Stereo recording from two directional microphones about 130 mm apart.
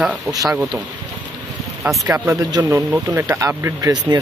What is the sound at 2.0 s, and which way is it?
Speech, 20° right (ahead or behind).